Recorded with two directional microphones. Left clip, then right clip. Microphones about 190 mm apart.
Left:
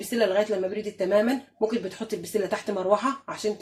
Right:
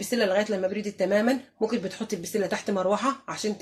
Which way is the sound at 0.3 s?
20° right (ahead or behind).